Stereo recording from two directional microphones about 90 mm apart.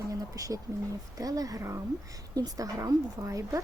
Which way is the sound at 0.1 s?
40° right (ahead or behind).